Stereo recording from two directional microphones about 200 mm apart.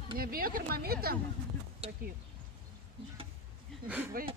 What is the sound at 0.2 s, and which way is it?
Speech, 45° right (ahead or behind).